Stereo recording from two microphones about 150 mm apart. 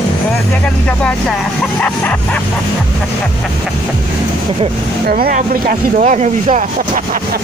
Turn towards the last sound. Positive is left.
turn(degrees=-55)  # may be behind; listen again after turning